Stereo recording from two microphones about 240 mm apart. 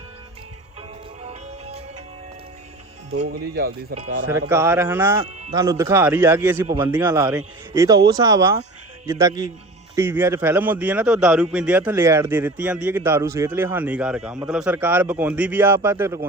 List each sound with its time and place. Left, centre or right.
1.2 s music: right
3.4 s speech: right
3.9 s speech: right
4.3 s a man's voice: centre
5.2 s speech: right
5.5 s a man's voice: centre